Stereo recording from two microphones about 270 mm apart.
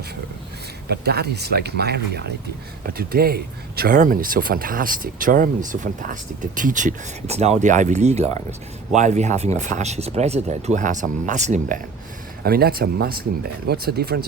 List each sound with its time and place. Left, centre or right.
0.9 s speech: right